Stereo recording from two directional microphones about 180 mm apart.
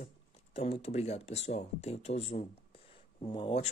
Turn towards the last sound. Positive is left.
turn(degrees=30)  # may be behind; listen again after turning